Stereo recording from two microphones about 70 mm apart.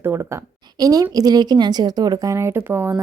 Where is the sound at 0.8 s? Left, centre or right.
Right.